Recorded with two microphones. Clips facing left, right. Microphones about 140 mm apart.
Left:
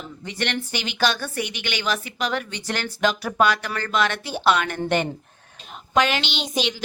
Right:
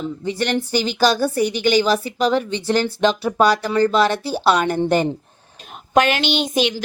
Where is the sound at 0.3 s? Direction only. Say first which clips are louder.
Right 6 dB; 35° right (ahead or behind).